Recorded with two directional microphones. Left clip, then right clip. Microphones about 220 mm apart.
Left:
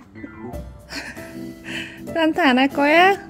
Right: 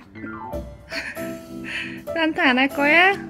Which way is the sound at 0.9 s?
20° left (ahead or behind).